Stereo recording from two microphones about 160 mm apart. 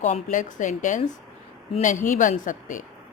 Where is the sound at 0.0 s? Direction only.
50° left (ahead or behind).